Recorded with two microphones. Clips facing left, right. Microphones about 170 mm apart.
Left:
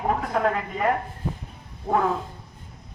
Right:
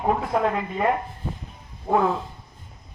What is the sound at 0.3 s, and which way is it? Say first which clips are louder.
Speech: even; centre (ahead or behind).